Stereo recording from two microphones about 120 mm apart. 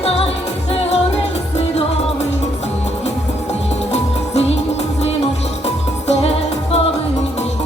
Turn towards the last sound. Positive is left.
turn(degrees=55)  # may be behind; listen again after turning